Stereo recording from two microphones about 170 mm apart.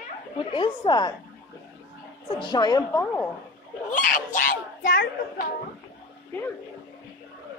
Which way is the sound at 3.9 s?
50° left (ahead or behind).